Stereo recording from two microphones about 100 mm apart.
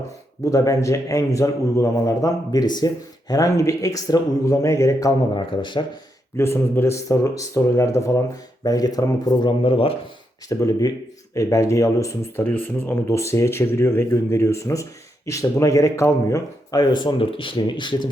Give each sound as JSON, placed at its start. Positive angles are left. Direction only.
{"t": 0.4, "sound": "a man's voice", "side_deg": 35}
{"t": 5.3, "sound": "a man's voice", "side_deg": 50}
{"t": 6.3, "sound": "a man's voice", "side_deg": 25}
{"t": 9.5, "sound": "speech", "side_deg": 65}
{"t": 10.5, "sound": "a man's voice", "side_deg": 35}
{"t": 16.8, "sound": "a man's voice", "side_deg": 50}